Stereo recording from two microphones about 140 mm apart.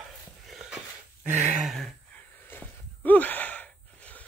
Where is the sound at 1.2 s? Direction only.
60° right (ahead or behind).